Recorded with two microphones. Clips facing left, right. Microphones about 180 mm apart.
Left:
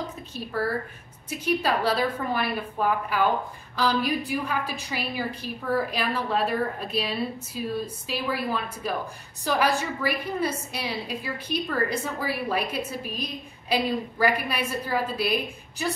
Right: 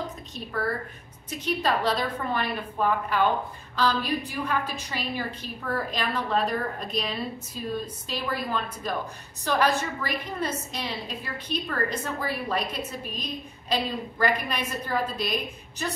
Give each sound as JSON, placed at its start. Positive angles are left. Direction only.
{"t": 1.3, "sound": "a woman's voice", "side_deg": 10}